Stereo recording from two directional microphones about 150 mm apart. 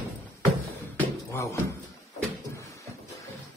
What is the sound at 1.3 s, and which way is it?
Speech, 20° left (ahead or behind).